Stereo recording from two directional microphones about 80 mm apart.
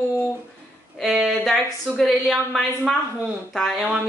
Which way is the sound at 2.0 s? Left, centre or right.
Centre.